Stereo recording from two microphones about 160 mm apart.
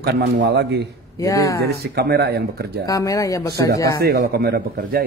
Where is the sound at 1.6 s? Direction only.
80° right.